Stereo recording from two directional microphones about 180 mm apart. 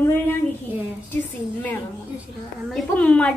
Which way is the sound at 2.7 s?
5° left (ahead or behind).